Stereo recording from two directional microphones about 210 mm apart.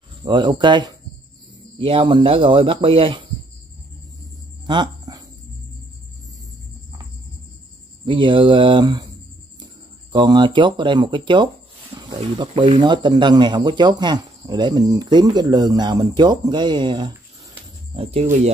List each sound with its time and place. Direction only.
0.2 s speech: 20° right (ahead or behind)
4.6 s a sound: 20° right (ahead or behind)
8.0 s speech: 25° right (ahead or behind)
10.1 s speech: 20° right (ahead or behind)
11.9 s snake: 20° right (ahead or behind)
12.4 s speech: 20° right (ahead or behind)